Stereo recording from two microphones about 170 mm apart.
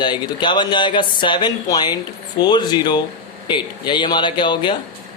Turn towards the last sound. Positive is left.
turn(degrees=25)  # may be behind; listen again after turning